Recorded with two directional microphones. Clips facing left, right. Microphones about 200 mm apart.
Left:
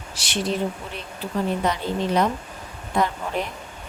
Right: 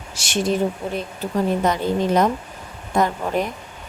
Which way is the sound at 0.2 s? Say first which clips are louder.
Right 4 dB; 45° right (ahead or behind).